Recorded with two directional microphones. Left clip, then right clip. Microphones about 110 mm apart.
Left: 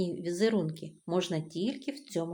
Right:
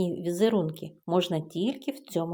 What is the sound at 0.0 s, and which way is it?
Speech, 35° right (ahead or behind).